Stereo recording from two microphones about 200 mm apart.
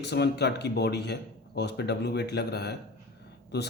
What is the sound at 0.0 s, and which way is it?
Speech, 55° left (ahead or behind).